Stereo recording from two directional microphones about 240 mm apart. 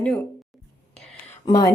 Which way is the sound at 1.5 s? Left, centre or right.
Centre.